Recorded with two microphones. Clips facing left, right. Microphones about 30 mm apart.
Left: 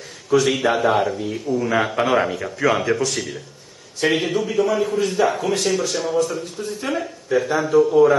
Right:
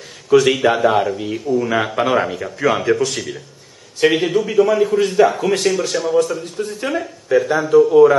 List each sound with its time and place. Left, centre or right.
0.3 s speech: centre
1.1 s a man's voice: centre
1.4 s a man's voice: centre